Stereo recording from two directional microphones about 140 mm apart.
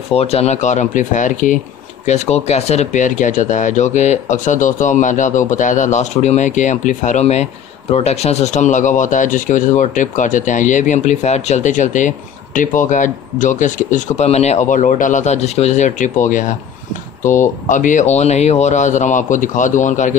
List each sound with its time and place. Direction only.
0.1 s speech: 45° left (ahead or behind); by 1.6 s 65° left (ahead or behind)
2.0 s speech: 50° left (ahead or behind)